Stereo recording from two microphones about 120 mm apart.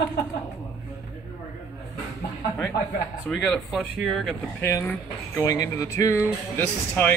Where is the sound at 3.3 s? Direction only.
Centre (ahead or behind).